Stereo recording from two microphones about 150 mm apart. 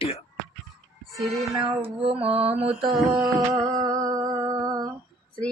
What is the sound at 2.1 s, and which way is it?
Mantra, 40° right (ahead or behind).